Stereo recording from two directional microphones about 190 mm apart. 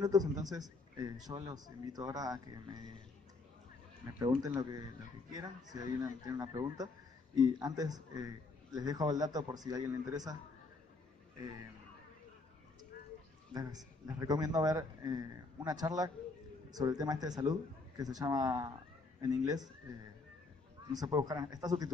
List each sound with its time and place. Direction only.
0.0 s a man's voice: 20° right (ahead or behind)
4.2 s a man's voice: 20° right (ahead or behind)
13.5 s a man's voice: 20° right (ahead or behind)
20.9 s a man's voice: 20° right (ahead or behind)